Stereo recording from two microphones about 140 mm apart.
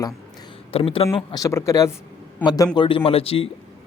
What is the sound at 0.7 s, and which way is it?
Speech, 45° left (ahead or behind).